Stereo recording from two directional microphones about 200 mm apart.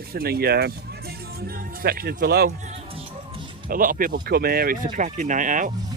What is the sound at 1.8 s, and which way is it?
Speech, 50° right (ahead or behind).